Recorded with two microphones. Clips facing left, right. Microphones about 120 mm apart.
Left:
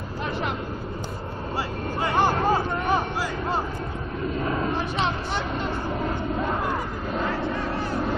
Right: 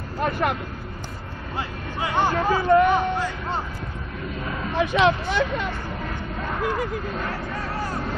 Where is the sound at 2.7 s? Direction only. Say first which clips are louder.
Right 8 dB; 65° right (ahead or behind).